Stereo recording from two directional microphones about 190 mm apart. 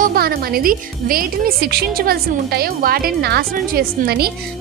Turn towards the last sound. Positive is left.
turn(degrees=-55)  # may be behind; listen again after turning